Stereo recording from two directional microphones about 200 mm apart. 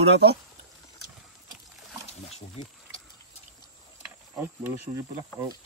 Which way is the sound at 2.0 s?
30° left (ahead or behind).